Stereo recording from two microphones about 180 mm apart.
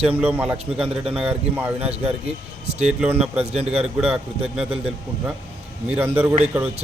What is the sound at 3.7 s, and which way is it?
A man's voice, 5° right (ahead or behind).